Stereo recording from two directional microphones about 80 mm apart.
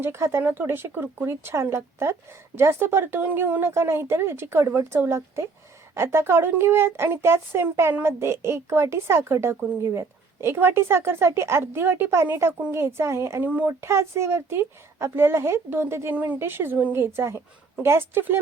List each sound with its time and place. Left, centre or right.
0.0 s a woman's voice: right
13.4 s speech: right
13.8 s a woman's voice: right
16.1 s speech: centre